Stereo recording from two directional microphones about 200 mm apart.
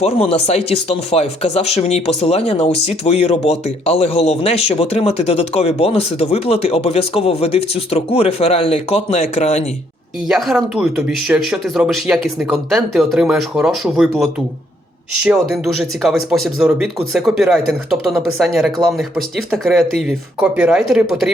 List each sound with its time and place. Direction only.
0.0 s speech: 30° left (ahead or behind)
10.2 s speech: centre (ahead or behind)